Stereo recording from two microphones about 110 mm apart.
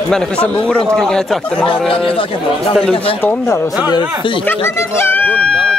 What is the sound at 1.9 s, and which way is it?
Speech, 55° left (ahead or behind).